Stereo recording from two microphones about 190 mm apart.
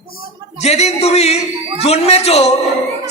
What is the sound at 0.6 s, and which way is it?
A man's voice, 35° left (ahead or behind).